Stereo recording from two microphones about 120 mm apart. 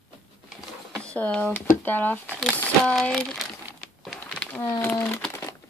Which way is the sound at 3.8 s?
5° left (ahead or behind).